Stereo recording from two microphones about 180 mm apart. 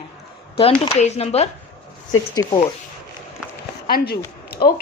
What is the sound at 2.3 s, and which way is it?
Speech, 20° left (ahead or behind).